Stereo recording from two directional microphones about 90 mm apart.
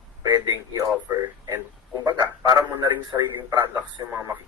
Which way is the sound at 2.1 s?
55° right (ahead or behind).